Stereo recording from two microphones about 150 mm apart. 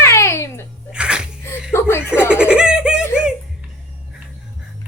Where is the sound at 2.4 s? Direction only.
5° right (ahead or behind).